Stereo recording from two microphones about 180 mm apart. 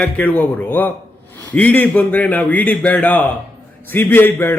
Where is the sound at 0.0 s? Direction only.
10° left (ahead or behind).